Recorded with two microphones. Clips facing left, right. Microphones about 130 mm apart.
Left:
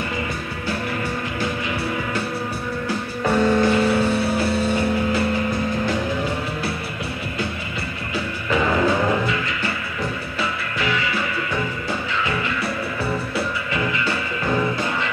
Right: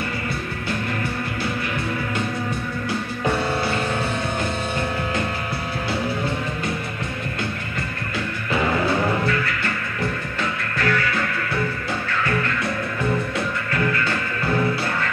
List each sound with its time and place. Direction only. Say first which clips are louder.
2.9 s music: left 2 dB; 15° left (ahead or behind)
8.5 s music: left 2 dB; 15° left (ahead or behind)
10.8 s music: right 2 dB; 15° left (ahead or behind)
12.1 s music: right 3 dB; 15° left (ahead or behind)
13.7 s music: right 1 dB; 15° left (ahead or behind)